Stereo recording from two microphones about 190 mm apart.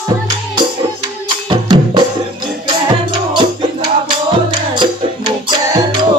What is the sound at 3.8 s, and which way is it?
Music, 25° right (ahead or behind).